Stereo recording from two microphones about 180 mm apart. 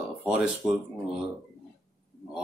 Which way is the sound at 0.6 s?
Centre (ahead or behind).